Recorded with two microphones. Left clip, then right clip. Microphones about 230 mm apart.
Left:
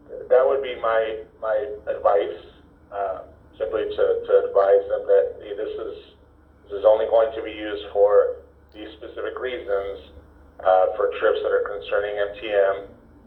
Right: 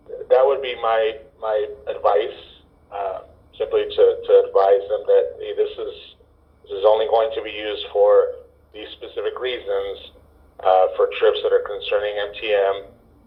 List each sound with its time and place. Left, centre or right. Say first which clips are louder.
0.3 s a man's voice: right 2 dB; right